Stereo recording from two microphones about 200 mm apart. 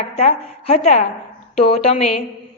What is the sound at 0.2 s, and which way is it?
A woman's voice, 30° left (ahead or behind).